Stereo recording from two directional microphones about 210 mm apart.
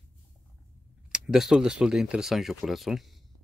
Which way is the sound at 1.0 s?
5° right (ahead or behind).